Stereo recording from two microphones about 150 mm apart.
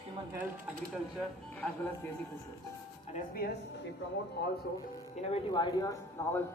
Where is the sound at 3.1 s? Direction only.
80° left.